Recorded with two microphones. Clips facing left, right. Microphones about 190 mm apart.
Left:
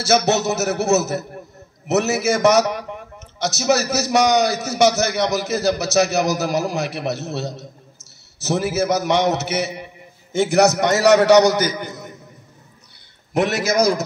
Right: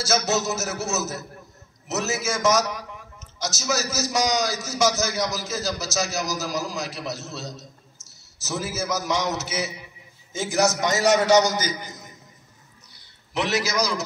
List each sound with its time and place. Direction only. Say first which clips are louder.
0.0 s a man's voice: left 6 dB; 65° left (ahead or behind)
13.3 s a man's voice: left 6 dB; 55° left (ahead or behind)